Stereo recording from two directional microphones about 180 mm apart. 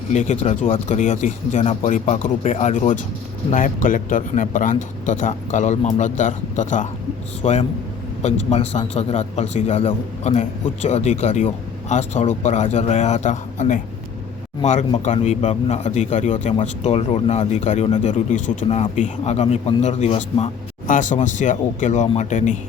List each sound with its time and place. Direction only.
0.1 s a man's voice: 40° left (ahead or behind)